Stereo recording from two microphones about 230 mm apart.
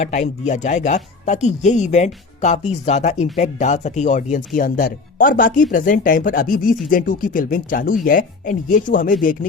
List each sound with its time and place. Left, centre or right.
0.0 s speech: left